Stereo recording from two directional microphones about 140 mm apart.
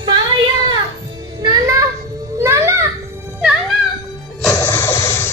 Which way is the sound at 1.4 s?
25° right (ahead or behind).